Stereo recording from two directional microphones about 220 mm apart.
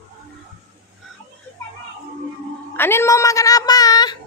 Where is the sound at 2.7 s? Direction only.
10° left (ahead or behind).